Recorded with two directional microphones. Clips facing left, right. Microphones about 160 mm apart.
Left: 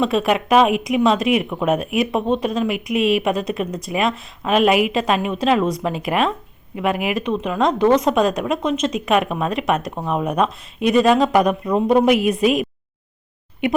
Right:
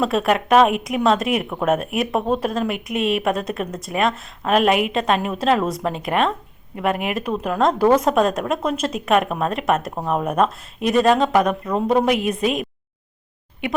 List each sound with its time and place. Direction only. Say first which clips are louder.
0.0 s speech: left 1 dB; centre (ahead or behind)
12.0 s a woman's voice: left 4 dB; 30° right (ahead or behind)